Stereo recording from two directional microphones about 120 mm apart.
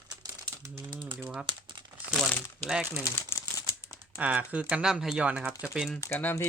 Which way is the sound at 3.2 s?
25° left (ahead or behind).